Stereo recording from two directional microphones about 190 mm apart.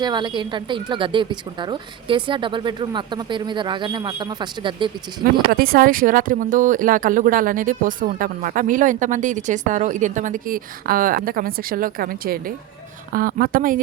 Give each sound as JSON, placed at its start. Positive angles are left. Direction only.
{"t": 0.0, "sound": "speech", "side_deg": -20}
{"t": 5.2, "sound": "speech", "side_deg": -50}